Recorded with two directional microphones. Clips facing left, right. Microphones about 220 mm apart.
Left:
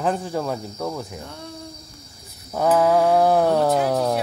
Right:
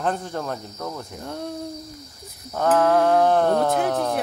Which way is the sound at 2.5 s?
10° left (ahead or behind).